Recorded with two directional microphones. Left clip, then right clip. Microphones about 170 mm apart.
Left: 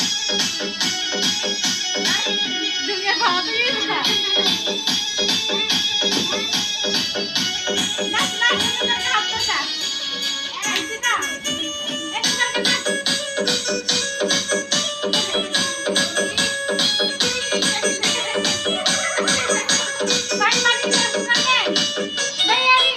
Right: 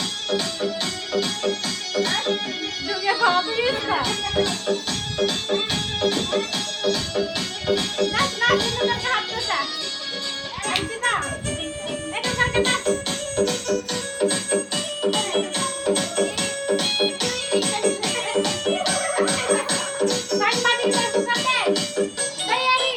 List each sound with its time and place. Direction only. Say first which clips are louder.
1.6 s music: left 3 dB; 25° right (ahead or behind)
12.2 s music: left 1 dB; 35° right (ahead or behind)